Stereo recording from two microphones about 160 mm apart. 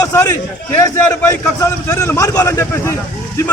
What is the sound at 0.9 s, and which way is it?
A man's voice, 20° left (ahead or behind).